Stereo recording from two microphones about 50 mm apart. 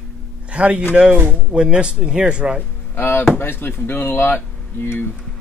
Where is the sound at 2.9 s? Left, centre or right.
Left.